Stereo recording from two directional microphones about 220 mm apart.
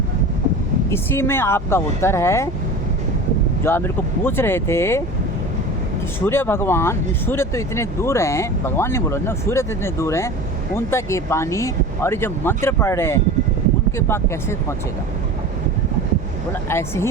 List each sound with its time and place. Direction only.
0.9 s speech: 10° left (ahead or behind)
3.6 s speech: 10° left (ahead or behind)
6.1 s speech: 10° left (ahead or behind)
16.6 s speech: 10° left (ahead or behind)